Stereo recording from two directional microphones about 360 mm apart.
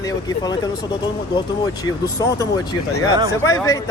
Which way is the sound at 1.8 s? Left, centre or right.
Centre.